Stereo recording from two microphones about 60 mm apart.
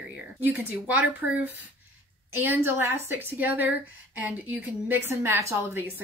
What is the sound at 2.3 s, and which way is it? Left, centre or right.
A woman's voice, right.